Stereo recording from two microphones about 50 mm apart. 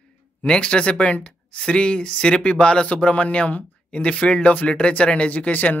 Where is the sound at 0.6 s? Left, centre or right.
Left.